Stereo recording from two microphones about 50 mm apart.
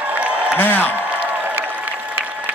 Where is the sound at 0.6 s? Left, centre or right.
Left.